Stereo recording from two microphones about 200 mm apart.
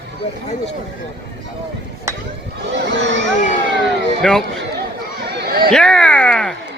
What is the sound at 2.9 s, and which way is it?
Crowd, 60° right (ahead or behind).